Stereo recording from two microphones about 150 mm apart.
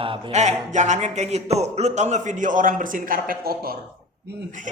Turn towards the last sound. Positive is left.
turn(degrees=-55)  # may be behind; listen again after turning